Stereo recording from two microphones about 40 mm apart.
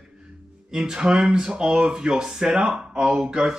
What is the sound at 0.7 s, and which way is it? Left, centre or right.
Speech, centre.